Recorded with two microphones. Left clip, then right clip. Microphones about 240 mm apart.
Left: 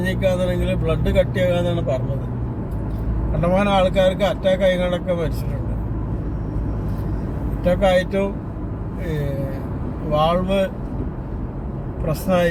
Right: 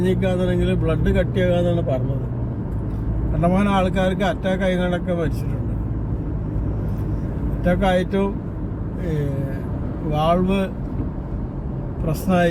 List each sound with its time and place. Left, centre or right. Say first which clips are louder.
0.0 s speech: left 1 dB; centre
3.4 s speech: left 3 dB; centre
7.6 s speech: left 3 dB; centre
10.1 s speech: left 1 dB; centre
12.3 s speech: left 1 dB; centre